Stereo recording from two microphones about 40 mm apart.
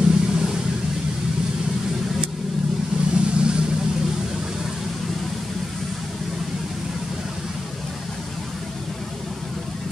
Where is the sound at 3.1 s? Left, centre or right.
Right.